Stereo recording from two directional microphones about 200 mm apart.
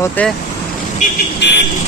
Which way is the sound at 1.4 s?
60° left (ahead or behind).